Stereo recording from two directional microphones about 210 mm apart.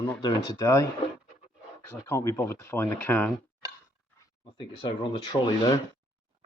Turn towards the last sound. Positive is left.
turn(degrees=25)  # may be behind; listen again after turning